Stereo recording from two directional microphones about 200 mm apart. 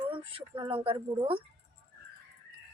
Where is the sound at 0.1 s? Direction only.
25° right (ahead or behind).